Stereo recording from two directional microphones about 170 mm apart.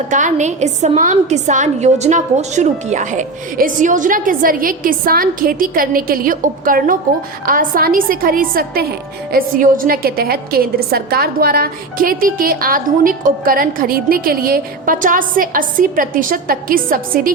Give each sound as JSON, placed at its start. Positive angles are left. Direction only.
{"t": 0.1, "sound": "a woman's voice", "side_deg": -45}